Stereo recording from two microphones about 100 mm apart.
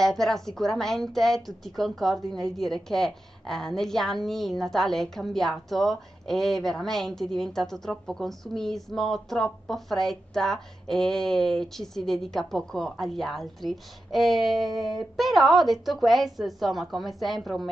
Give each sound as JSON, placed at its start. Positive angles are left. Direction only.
{"t": 0.0, "sound": "a woman's voice", "side_deg": 5}